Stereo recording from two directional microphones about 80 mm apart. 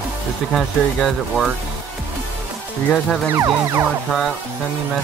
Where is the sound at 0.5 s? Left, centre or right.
Centre.